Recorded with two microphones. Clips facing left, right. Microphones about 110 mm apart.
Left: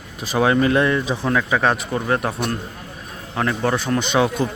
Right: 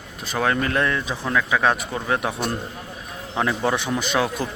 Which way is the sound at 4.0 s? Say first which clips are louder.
Left 4 dB; centre (ahead or behind).